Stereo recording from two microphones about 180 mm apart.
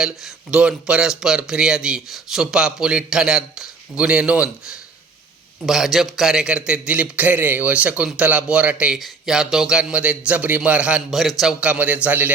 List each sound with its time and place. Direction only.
0.5 s a man's voice: 5° right (ahead or behind)
5.6 s a man's voice: centre (ahead or behind)